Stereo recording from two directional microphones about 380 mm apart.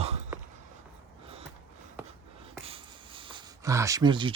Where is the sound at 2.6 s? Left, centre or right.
Centre.